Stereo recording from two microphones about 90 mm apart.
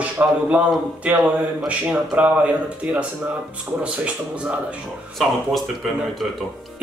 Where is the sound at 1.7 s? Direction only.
15° right (ahead or behind).